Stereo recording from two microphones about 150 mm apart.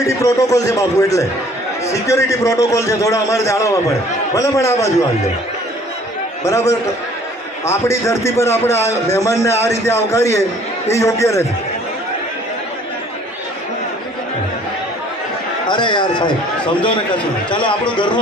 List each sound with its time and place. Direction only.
0.0 s a man's voice: 20° left (ahead or behind)
6.4 s a man's voice: 20° left (ahead or behind)
15.6 s a man's voice: 30° left (ahead or behind)
17.5 s a man's voice: 35° left (ahead or behind)